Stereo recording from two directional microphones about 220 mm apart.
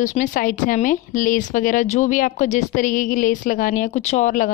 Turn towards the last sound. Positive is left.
turn(degrees=35)  # may be behind; listen again after turning